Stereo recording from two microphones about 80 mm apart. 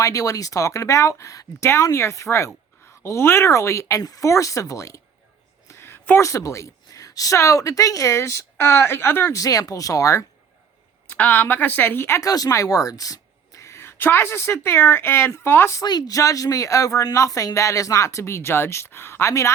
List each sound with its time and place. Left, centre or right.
0.0 s speech: left
5.6 s a sound: left
6.2 s speech: left
9.3 s speech: left
11.1 s a woman's voice: left
12.2 s a woman's voice: left
15.8 s speech: left